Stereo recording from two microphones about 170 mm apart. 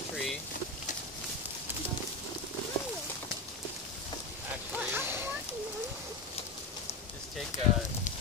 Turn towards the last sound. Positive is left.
turn(degrees=45)  # may be behind; listen again after turning